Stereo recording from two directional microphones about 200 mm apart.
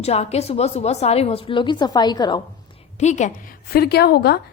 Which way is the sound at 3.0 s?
35° left (ahead or behind).